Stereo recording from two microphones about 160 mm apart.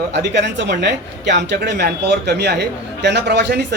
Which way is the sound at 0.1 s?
90° right.